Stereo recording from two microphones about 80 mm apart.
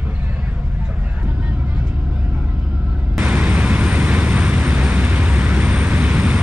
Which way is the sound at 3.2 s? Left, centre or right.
Centre.